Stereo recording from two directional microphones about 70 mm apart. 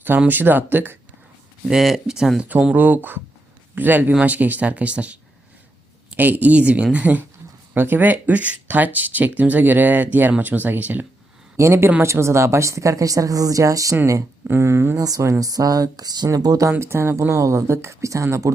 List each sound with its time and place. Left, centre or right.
0.3 s speech: right
1.6 s speech: centre; by 11.0 s right
11.5 s speech: right
14.4 s speech: right
14.9 s speech: right
16.7 s speech: right